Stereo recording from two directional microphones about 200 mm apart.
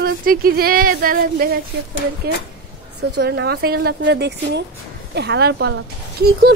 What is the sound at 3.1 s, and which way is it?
A woman's voice, 60° right (ahead or behind).